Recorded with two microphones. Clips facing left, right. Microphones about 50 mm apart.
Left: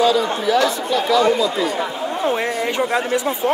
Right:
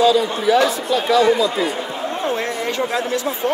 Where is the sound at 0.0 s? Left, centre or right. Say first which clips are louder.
Right 1 dB; centre.